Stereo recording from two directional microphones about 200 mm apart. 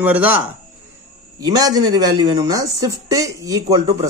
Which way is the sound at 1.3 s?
20° right (ahead or behind).